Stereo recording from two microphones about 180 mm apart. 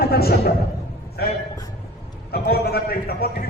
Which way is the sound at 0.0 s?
60° left (ahead or behind).